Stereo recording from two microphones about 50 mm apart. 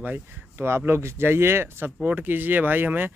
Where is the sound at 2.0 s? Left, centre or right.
Right.